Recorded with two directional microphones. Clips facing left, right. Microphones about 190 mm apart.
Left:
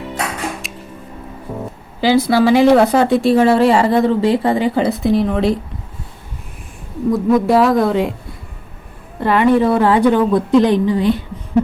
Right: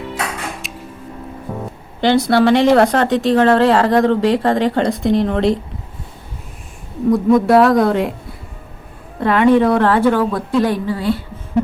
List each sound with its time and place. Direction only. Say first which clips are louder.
0.6 s a sound: right 1 dB; centre (ahead or behind)
2.0 s speech: even; 5° left (ahead or behind)
7.1 s speech: right 2 dB; centre (ahead or behind)
9.2 s speech: right 1 dB; centre (ahead or behind)
9.9 s a woman's voice: left 2 dB; 15° left (ahead or behind)